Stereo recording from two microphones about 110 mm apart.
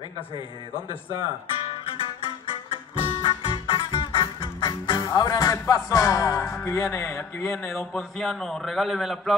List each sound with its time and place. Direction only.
2.7 s music: 45° left (ahead or behind); by 7.8 s 20° left (ahead or behind)
7.9 s a man's voice: centre (ahead or behind)